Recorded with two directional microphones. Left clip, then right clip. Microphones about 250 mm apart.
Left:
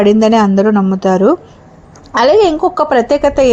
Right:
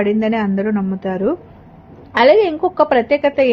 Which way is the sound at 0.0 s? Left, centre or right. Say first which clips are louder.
Left 8 dB; left.